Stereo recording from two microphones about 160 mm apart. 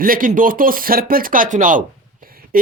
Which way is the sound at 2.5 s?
60° right (ahead or behind).